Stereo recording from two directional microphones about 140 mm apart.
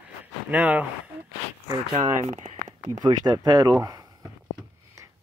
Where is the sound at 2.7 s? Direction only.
30° right (ahead or behind).